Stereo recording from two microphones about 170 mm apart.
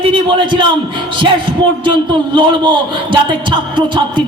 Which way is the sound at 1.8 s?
30° right (ahead or behind).